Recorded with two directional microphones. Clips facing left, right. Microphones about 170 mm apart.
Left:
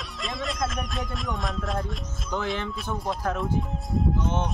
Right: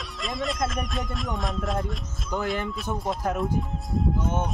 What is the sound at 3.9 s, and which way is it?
Speech, 5° right (ahead or behind).